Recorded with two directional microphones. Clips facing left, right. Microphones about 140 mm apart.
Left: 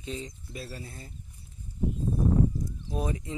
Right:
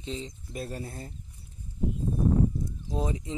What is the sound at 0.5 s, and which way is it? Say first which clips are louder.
Speech: right 4 dB; 50° right (ahead or behind).